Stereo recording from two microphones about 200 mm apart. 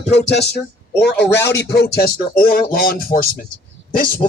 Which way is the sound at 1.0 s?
55° left (ahead or behind).